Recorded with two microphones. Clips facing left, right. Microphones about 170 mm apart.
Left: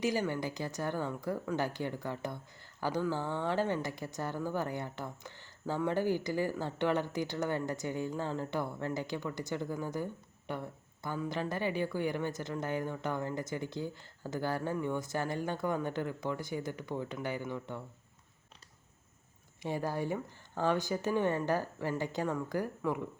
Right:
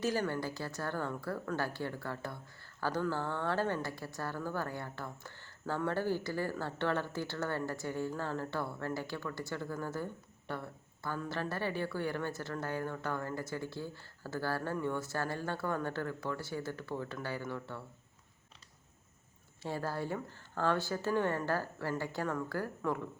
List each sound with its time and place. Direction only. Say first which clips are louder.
0.0 s speech: left 1 dB; 15° left (ahead or behind)
19.6 s speech: left 3 dB; 15° left (ahead or behind)